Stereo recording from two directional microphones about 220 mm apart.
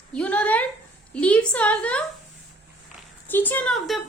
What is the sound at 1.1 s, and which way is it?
Speech, 5° left (ahead or behind).